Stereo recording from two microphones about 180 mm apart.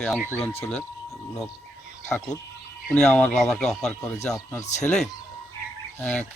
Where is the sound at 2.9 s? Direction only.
10° left (ahead or behind).